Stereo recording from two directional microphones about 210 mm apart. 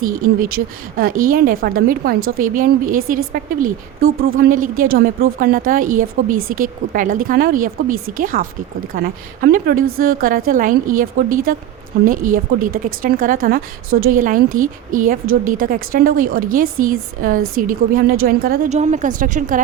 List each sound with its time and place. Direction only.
0.0 s speech: 40° right (ahead or behind)
4.4 s speech: 40° right (ahead or behind)